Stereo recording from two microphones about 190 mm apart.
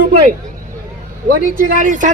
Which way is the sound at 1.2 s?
45° right (ahead or behind).